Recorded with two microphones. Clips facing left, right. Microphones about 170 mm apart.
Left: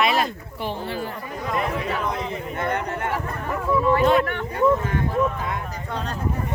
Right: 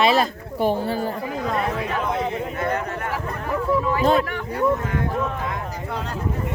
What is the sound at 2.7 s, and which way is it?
Speech, 25° left (ahead or behind).